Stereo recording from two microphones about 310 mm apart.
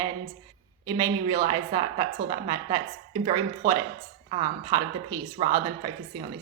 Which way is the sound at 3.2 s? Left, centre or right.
Centre.